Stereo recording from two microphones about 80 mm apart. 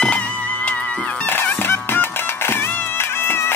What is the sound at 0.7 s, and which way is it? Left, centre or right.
Music, centre.